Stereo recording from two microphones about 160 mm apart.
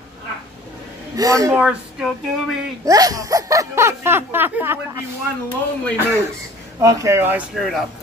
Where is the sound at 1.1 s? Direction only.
20° right (ahead or behind).